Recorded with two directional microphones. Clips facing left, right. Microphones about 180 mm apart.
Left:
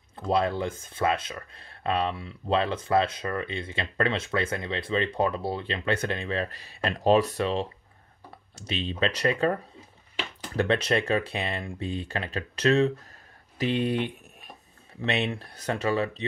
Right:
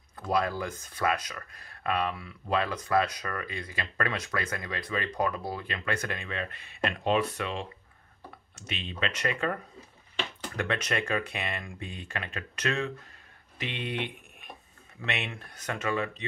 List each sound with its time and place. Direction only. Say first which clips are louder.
0.1 s speech: left 3 dB; 25° left (ahead or behind)